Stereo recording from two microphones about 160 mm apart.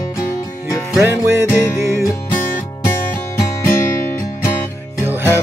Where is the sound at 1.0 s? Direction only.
15° right (ahead or behind).